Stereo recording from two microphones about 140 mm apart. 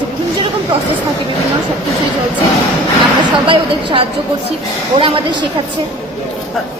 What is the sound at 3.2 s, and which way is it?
A woman's voice, 35° right (ahead or behind).